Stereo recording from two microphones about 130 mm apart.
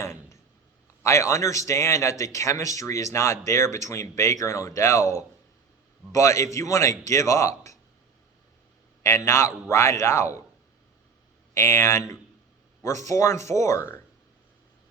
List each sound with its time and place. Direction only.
1.0 s a man's voice: 20° left (ahead or behind)
9.0 s a man's voice: 20° left (ahead or behind)
11.5 s a man's voice: 20° left (ahead or behind)